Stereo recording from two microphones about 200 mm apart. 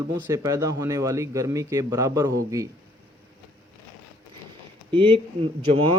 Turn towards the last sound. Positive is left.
turn(degrees=-25)  # may be behind; listen again after turning